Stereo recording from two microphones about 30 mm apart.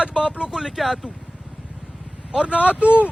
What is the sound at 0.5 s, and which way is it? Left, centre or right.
Speech, centre.